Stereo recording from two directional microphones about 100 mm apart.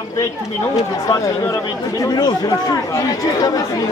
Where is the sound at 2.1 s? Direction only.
40° left (ahead or behind).